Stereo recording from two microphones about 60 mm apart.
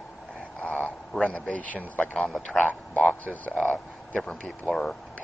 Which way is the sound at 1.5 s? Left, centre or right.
Left.